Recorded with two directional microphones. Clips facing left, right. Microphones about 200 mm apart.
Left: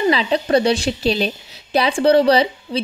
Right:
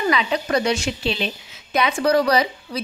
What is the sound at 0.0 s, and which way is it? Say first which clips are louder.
A woman's voice: left 4 dB; 30° left (ahead or behind).